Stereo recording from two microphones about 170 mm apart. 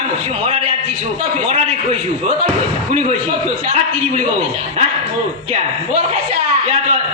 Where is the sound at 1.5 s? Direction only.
35° right (ahead or behind).